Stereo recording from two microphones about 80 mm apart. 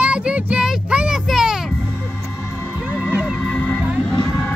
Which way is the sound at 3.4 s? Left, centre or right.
Centre.